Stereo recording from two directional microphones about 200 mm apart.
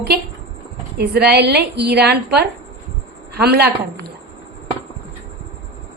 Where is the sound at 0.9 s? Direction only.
55° right (ahead or behind).